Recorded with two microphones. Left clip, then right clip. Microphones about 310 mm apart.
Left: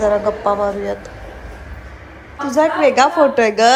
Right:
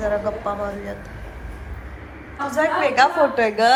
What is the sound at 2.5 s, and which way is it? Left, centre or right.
A woman's voice, centre.